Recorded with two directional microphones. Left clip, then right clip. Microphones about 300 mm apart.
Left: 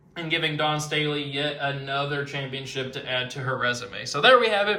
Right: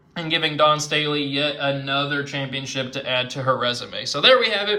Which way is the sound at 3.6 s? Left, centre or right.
Centre.